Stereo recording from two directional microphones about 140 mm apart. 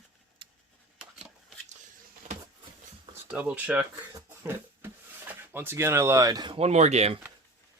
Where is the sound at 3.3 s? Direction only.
10° right (ahead or behind).